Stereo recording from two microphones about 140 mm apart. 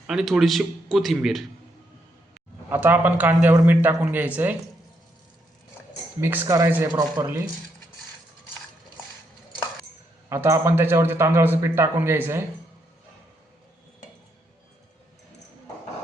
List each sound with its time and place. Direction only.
0.1 s speech: 5° right (ahead or behind)
2.6 s a man's voice: 15° right (ahead or behind)
6.1 s a man's voice: 15° right (ahead or behind)
10.2 s a man's voice: 20° right (ahead or behind)